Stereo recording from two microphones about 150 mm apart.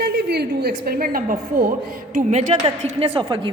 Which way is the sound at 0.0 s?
90° right.